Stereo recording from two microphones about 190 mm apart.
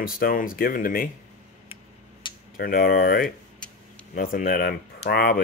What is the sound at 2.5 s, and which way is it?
Speech, 50° left (ahead or behind).